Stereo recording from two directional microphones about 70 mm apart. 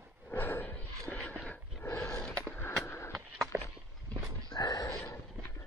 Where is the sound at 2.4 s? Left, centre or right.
Left.